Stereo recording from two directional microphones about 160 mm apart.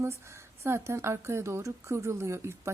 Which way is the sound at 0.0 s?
15° right (ahead or behind).